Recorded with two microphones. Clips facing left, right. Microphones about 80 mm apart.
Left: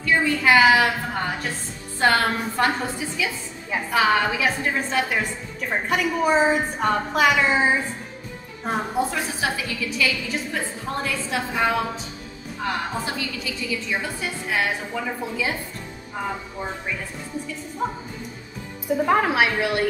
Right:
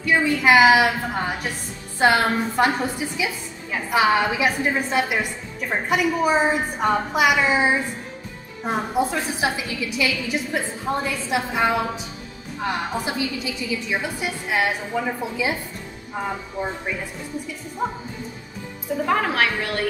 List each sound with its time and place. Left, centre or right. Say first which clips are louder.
0.0 s a woman's voice: right 1 dB; centre
19.0 s a woman's voice: left 1 dB; centre